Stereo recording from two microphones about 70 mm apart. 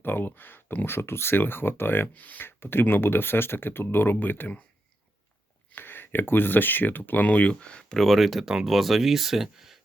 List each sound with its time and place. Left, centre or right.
0.0 s speech: left
5.7 s speech: left; by 9.8 s centre